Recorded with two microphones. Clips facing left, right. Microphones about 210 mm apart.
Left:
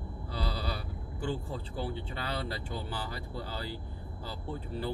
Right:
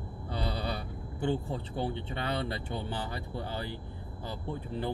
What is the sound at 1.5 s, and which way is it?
Speech, 25° right (ahead or behind).